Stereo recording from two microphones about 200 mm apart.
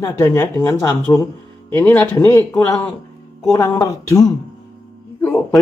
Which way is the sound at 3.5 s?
15° left (ahead or behind).